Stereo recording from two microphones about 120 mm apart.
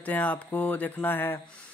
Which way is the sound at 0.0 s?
10° left (ahead or behind).